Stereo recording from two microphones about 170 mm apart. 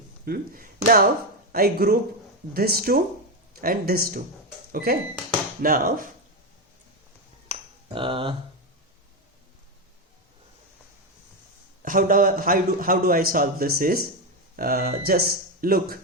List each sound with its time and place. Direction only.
0.3 s a man's voice: 60° right (ahead or behind)
7.4 s finger snapping: 30° right (ahead or behind)
11.8 s a man's voice: 55° right (ahead or behind)